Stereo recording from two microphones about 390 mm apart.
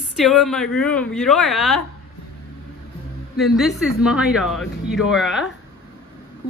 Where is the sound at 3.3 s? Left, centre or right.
Centre.